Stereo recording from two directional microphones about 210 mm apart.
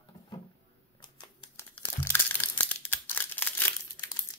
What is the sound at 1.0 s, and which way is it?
Crumpling, 15° left (ahead or behind).